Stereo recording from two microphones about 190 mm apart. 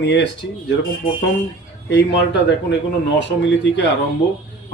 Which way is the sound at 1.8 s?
65° left (ahead or behind).